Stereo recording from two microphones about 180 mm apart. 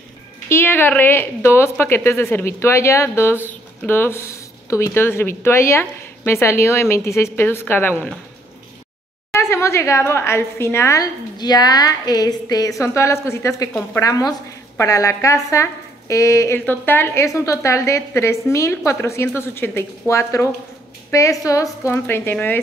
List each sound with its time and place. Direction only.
0.5 s speech: 10° left (ahead or behind)
9.4 s speech: 15° left (ahead or behind)